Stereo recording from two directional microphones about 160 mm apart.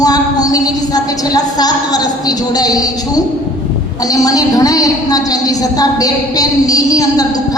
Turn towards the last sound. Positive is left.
turn(degrees=25)  # may be behind; listen again after turning